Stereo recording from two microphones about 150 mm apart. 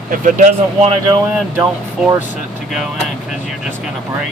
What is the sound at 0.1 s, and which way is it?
Speech, 60° right (ahead or behind).